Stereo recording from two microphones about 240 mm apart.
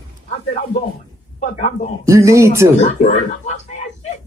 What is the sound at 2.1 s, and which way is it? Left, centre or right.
Speech, centre.